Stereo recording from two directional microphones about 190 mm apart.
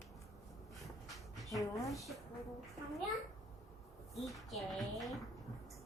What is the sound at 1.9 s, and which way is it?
Speech, centre (ahead or behind).